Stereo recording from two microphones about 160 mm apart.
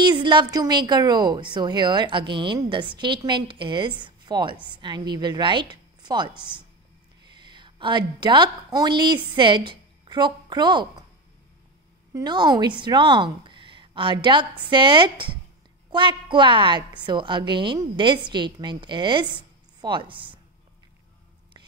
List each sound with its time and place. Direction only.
0.0 s a woman's voice: 30° right (ahead or behind)
12.1 s a woman's voice: 25° right (ahead or behind)